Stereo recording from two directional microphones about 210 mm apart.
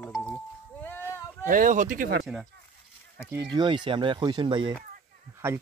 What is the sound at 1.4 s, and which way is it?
Speech, 40° right (ahead or behind).